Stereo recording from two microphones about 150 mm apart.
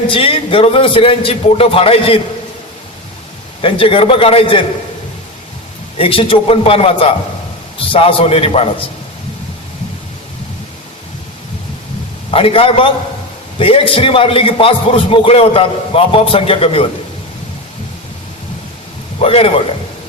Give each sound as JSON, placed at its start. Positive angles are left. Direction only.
{"t": 0.1, "sound": "a man's voice", "side_deg": 35}
{"t": 3.6, "sound": "a man's voice", "side_deg": 35}
{"t": 6.0, "sound": "a man's voice", "side_deg": 35}
{"t": 12.3, "sound": "a man's voice", "side_deg": 40}
{"t": 19.2, "sound": "a man's voice", "side_deg": 40}